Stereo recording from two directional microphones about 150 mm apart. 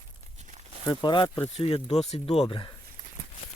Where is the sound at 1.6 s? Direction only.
45° left (ahead or behind).